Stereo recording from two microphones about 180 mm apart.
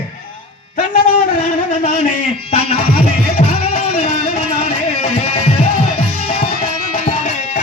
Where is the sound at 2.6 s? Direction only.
35° left (ahead or behind).